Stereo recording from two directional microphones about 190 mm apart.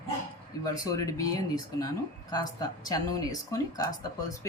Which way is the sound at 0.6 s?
20° left (ahead or behind).